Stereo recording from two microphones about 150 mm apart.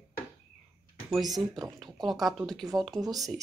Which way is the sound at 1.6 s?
Centre (ahead or behind).